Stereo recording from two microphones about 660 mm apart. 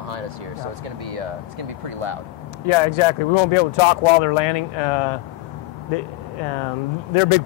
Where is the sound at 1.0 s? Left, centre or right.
Right.